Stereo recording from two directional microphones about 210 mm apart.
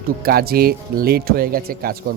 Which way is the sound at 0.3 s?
45° right (ahead or behind).